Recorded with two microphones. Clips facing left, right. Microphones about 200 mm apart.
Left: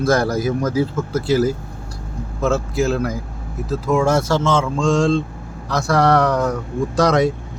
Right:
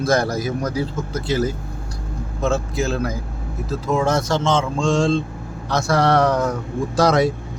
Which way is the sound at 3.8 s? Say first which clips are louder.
Left 3 dB; 20° right (ahead or behind).